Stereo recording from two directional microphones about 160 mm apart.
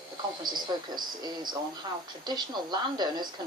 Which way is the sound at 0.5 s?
25° right (ahead or behind).